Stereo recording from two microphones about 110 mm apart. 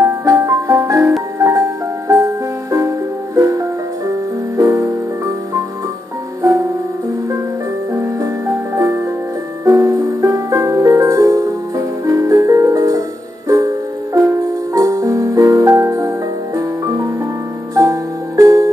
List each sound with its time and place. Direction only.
0.0 s music: 30° right (ahead or behind)
7.9 s music: 25° right (ahead or behind)